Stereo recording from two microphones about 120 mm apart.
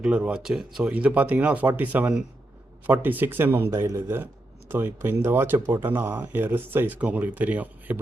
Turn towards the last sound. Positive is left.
turn(degrees=-15)  # may be behind; listen again after turning